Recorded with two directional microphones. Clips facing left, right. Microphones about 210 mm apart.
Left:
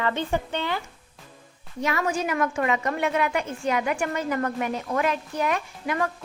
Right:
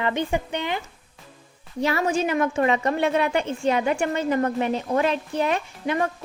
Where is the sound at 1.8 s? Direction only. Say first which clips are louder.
Right 3 dB; 30° right (ahead or behind).